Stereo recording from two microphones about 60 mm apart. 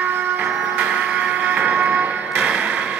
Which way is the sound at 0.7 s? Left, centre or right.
Centre.